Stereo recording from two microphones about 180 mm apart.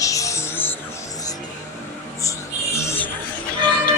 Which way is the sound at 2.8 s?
15° left (ahead or behind).